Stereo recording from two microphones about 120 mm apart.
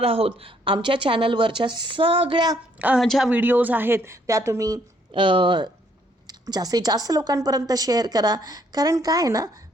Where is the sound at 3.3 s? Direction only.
15° right (ahead or behind).